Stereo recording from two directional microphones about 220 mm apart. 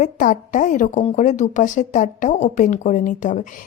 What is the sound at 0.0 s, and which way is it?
A woman's voice, 35° left (ahead or behind).